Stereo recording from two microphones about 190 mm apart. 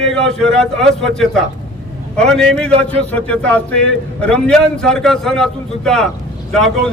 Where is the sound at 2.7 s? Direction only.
30° right (ahead or behind).